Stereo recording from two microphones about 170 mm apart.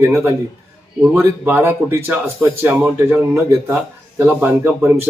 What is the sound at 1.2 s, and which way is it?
Speech, 10° right (ahead or behind).